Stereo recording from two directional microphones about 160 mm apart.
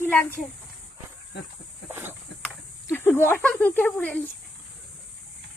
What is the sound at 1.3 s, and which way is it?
Speech, 90° left.